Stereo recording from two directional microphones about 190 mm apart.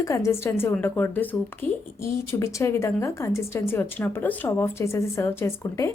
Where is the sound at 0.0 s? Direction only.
15° left (ahead or behind).